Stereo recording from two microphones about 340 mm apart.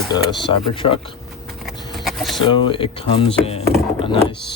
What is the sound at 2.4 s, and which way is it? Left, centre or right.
Speech, centre.